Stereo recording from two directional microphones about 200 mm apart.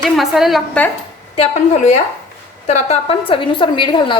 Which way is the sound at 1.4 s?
35° left (ahead or behind).